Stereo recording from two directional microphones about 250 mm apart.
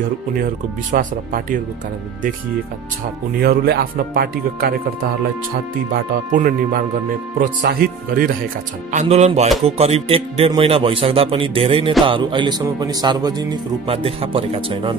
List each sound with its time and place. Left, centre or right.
0.9 s speech: right
3.3 s speech: right
5.9 s speech: right